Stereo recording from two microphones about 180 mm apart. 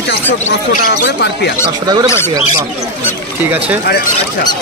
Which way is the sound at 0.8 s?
65° left (ahead or behind).